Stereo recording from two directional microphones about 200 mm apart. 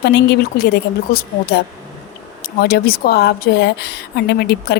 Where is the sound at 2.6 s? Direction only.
50° left (ahead or behind).